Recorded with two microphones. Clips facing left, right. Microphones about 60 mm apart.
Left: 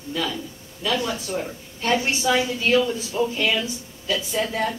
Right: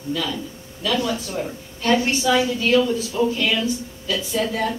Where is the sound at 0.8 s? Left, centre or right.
Centre.